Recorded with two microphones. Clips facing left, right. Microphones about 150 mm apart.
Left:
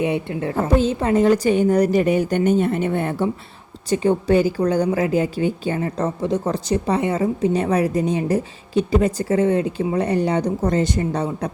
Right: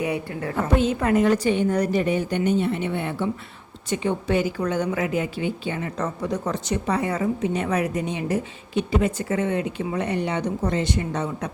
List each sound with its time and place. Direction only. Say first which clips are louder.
0.0 s a woman's voice: left 5 dB; 25° left (ahead or behind)